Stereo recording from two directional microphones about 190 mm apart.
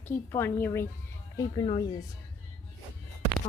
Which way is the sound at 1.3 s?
20° left (ahead or behind).